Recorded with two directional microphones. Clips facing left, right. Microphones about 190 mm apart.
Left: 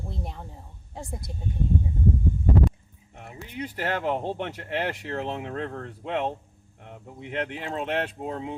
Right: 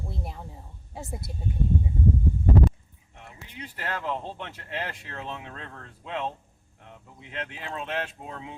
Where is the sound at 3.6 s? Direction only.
65° left (ahead or behind).